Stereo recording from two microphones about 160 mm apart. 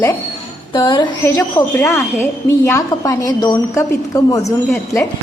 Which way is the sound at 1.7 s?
15° left (ahead or behind).